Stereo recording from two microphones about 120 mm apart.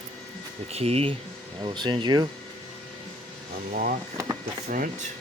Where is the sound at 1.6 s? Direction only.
40° right (ahead or behind).